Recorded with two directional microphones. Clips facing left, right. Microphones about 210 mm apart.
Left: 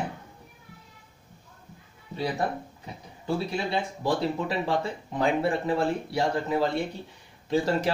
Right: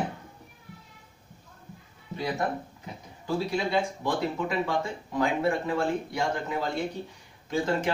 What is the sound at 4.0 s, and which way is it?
Speech, 30° left (ahead or behind).